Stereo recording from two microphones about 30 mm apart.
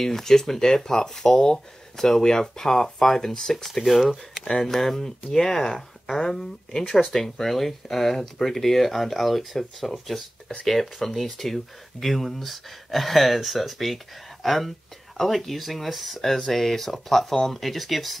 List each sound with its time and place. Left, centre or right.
0.0 s speech: centre
3.5 s speech: centre
4.5 s speech: centre